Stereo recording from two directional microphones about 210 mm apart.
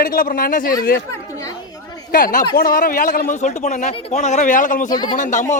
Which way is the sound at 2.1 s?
40° left (ahead or behind).